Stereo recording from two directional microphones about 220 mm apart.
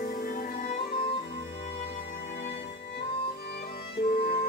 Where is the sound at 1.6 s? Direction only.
45° left (ahead or behind).